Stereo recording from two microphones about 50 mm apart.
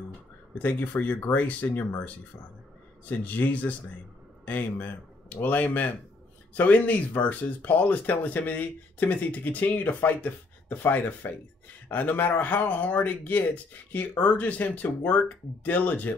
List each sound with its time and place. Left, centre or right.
0.6 s speech: left
3.1 s speech: left